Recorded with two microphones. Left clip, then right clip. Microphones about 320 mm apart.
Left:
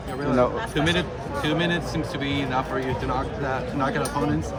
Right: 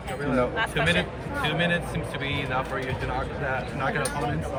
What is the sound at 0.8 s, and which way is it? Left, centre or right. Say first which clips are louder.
Speech: even; left.